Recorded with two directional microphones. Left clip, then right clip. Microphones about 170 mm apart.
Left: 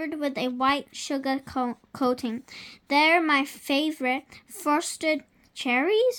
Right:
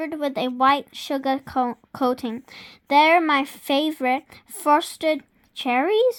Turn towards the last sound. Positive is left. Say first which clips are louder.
# right 3 dB
turn(degrees=-35)  # may be behind; listen again after turning